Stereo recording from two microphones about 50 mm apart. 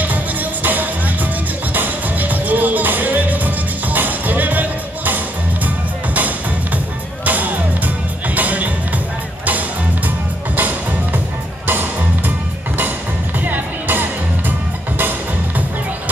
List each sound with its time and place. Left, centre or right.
0.7 s music: right
7.2 s music: right
10.0 s music: right
13.4 s music: right